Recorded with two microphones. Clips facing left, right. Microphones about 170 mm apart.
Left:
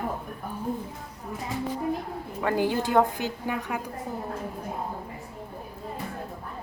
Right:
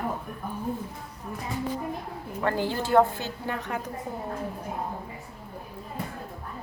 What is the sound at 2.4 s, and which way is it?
A woman's voice, 15° left (ahead or behind).